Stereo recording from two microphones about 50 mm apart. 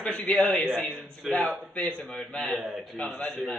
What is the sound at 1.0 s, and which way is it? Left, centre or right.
Speech, centre.